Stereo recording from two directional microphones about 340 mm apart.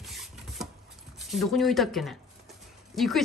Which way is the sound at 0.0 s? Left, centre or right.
Centre.